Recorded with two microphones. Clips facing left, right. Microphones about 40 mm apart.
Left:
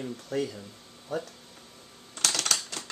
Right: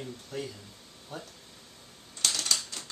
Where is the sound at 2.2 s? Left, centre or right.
Left.